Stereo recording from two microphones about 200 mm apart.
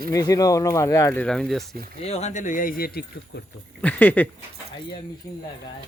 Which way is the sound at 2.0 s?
30° left (ahead or behind).